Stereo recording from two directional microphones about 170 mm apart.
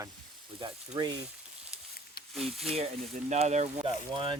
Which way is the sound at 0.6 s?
30° right (ahead or behind).